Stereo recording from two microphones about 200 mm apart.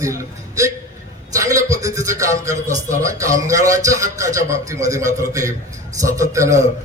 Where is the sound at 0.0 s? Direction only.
15° right (ahead or behind).